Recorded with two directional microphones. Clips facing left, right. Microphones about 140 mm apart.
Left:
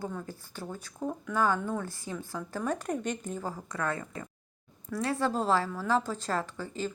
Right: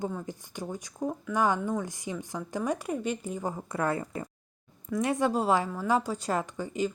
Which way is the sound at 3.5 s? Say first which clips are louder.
Right 6 dB; 25° right (ahead or behind).